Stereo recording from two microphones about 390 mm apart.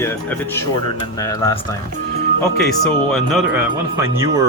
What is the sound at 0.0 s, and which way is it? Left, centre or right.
Speech, centre.